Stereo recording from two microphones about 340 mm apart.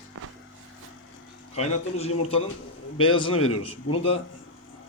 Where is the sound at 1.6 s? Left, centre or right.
Centre.